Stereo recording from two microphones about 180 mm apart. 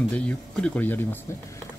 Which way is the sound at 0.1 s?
5° left (ahead or behind).